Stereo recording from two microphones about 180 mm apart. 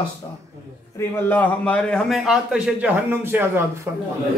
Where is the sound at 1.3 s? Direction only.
10° left (ahead or behind); by 3.6 s 10° right (ahead or behind).